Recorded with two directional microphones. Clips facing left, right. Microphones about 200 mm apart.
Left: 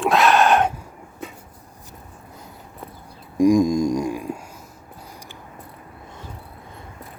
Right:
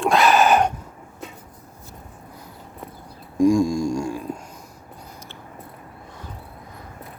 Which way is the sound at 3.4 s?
15° left (ahead or behind).